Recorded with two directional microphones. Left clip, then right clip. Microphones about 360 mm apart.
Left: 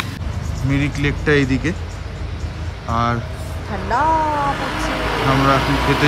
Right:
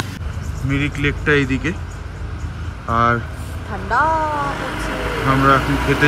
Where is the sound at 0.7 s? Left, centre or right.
Centre.